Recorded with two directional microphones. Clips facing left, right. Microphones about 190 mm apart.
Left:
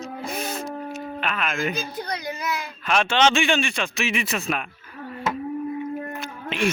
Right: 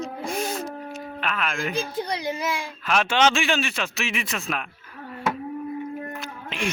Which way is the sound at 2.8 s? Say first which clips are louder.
Left 1 dB; 5° right (ahead or behind).